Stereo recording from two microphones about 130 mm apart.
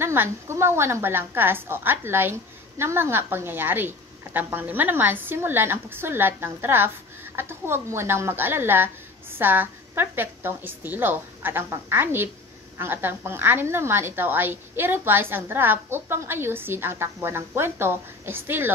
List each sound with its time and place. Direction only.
0.0 s a woman's voice: 20° right (ahead or behind)